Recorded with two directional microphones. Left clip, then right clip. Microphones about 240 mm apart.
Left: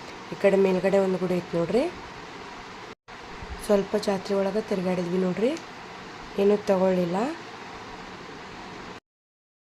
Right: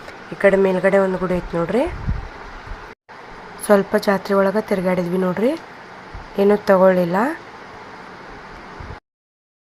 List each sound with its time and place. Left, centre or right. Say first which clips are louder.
0.4 s a woman's voice: right 6 dB; centre
3.7 s a woman's voice: right 8 dB; centre